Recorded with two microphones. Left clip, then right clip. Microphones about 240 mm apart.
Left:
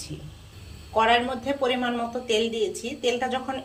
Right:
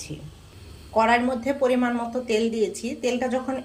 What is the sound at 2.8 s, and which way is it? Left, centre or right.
Speech, right.